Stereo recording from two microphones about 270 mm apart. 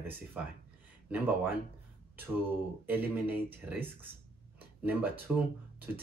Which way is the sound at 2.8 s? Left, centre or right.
Centre.